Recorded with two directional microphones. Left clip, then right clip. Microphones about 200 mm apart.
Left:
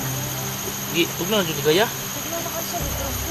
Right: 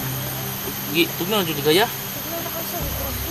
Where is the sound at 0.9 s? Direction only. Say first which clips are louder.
Right 1 dB; 60° right (ahead or behind).